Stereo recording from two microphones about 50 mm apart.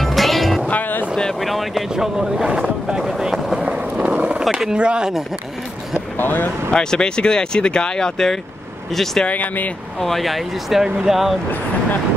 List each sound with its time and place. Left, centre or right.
0.0 s music: centre
0.7 s music: left
1.4 s speech: centre
2.1 s speech: centre
3.1 s boat: centre
3.6 s vehicle: right
4.1 s a sound: right
4.7 s speech: centre
5.9 s speech: left
6.7 s speech: centre
9.2 s speech: left
9.9 s speech: centre